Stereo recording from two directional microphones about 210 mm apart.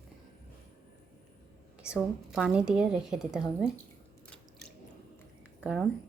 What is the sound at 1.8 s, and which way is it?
A woman's voice, 5° right (ahead or behind).